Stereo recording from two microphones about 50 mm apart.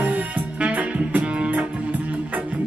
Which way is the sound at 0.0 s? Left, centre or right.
Right.